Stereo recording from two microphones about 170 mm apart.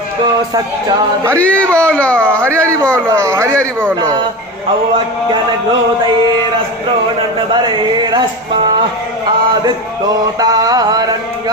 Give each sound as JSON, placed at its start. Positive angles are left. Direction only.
{"t": 1.4, "sound": "speech", "side_deg": 5}
{"t": 3.1, "sound": "speech", "side_deg": -15}
{"t": 7.5, "sound": "mantra", "side_deg": -25}
{"t": 10.4, "sound": "mantra", "side_deg": -20}